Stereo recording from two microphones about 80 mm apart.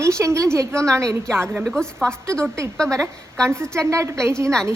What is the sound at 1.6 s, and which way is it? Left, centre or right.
A woman's voice, centre.